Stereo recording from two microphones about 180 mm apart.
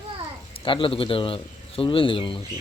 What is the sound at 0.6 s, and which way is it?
Speech, 30° left (ahead or behind).